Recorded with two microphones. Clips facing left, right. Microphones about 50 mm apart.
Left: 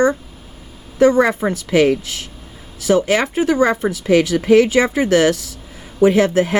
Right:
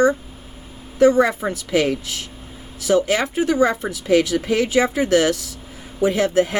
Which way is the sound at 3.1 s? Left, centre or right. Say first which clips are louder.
Left 3 dB; left.